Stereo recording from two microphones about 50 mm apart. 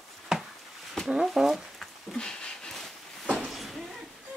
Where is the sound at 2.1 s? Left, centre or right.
Centre.